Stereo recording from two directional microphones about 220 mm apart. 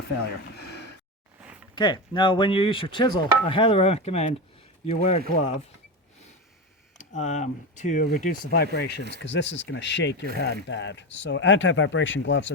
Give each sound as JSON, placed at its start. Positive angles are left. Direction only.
{"t": 0.5, "sound": "a sound", "side_deg": 50}
{"t": 1.7, "sound": "speech", "side_deg": 20}
{"t": 7.0, "sound": "speech", "side_deg": 35}